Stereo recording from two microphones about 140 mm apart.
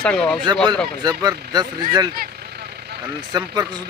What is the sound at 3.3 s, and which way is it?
Speech, 30° right (ahead or behind).